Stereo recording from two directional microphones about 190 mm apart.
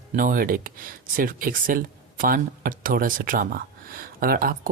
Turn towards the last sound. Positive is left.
turn(degrees=-50)  # may be behind; listen again after turning